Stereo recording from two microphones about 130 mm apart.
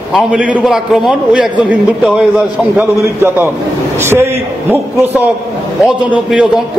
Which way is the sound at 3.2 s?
20° right (ahead or behind).